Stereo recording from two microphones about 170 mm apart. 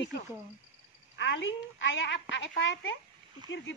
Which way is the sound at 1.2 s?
90° left.